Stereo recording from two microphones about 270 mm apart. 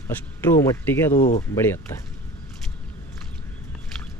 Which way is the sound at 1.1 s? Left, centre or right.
Left.